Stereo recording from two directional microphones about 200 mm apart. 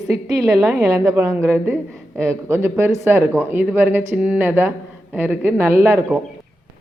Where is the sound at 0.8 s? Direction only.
15° right (ahead or behind).